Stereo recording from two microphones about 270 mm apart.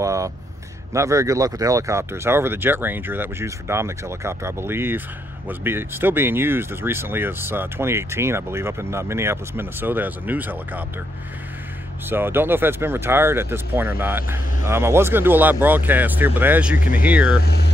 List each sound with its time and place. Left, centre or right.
0.0 s a sound: centre
0.9 s speech: centre
12.1 s speech: centre
16.7 s speech: left
17.0 s speech: centre